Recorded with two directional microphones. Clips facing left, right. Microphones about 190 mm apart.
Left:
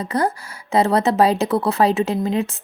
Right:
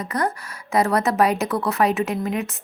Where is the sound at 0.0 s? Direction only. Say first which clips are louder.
Left 3 dB; 30° left (ahead or behind).